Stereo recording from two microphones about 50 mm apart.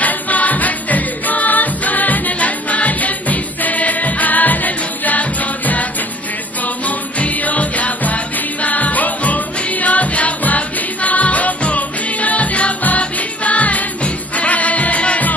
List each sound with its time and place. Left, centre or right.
0.0 s music: left
7.2 s music: left